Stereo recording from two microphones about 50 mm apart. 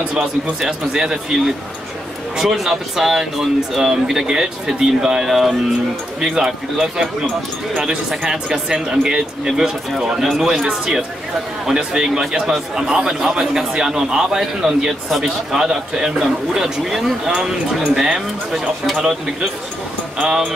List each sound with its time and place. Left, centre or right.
0.1 s a man's voice: centre
5.3 s a man's voice: centre
10.5 s a man's voice: centre
20.2 s a man's voice: centre